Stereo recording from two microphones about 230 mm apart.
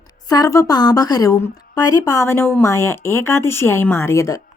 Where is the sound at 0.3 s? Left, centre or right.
Centre.